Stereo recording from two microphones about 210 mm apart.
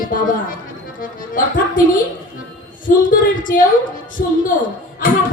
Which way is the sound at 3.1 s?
40° left (ahead or behind).